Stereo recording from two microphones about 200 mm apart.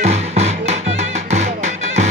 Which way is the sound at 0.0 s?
35° right (ahead or behind).